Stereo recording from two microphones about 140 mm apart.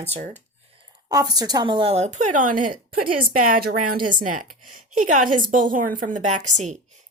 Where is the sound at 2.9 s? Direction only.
90° right; by 6.7 s 60° right (ahead or behind).